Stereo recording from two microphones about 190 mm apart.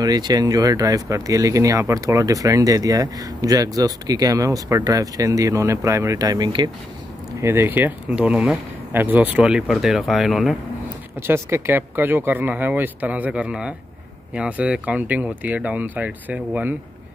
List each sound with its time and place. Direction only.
0.0 s speech: 20° right (ahead or behind)
7.4 s speech: 10° right (ahead or behind)
11.1 s speech: 15° right (ahead or behind)